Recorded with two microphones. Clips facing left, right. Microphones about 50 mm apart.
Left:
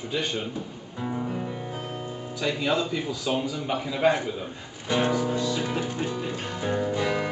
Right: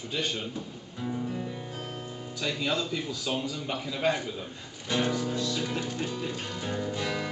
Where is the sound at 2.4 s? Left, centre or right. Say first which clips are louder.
Left 4 dB; centre.